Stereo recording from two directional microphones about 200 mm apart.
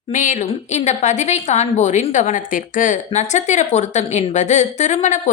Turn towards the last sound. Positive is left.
turn(degrees=35)  # may be behind; listen again after turning